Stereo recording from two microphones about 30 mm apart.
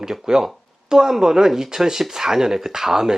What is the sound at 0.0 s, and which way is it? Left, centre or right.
Speech, centre.